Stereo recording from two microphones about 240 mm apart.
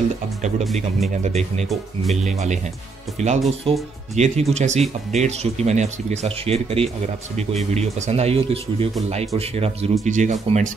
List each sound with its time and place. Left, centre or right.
1.2 s speech: right